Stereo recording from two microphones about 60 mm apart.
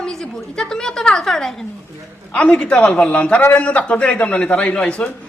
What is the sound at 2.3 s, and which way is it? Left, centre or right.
A man's voice, left.